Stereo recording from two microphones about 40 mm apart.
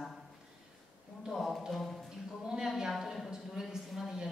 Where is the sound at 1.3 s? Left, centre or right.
Centre.